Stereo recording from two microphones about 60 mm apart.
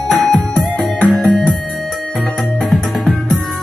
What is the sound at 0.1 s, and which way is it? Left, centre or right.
Music, centre.